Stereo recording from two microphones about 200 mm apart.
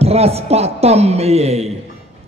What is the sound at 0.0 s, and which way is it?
A man's voice, 30° right (ahead or behind).